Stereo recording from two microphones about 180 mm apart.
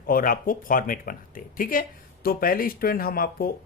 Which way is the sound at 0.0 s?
50° left (ahead or behind).